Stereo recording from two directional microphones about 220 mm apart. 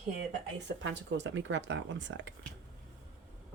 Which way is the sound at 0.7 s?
55° right (ahead or behind).